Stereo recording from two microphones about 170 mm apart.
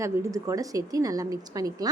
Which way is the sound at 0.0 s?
15° right (ahead or behind).